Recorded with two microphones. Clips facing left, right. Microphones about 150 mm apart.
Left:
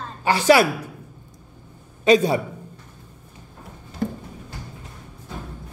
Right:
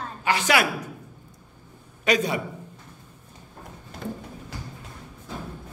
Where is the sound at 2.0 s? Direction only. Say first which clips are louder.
Left 7 dB; 30° left (ahead or behind).